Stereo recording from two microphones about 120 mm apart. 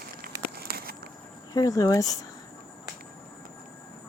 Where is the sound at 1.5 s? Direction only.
30° left (ahead or behind).